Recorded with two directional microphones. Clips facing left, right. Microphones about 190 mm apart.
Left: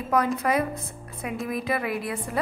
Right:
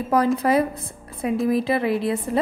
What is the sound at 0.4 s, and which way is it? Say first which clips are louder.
A woman's voice: right 5 dB; 30° right (ahead or behind).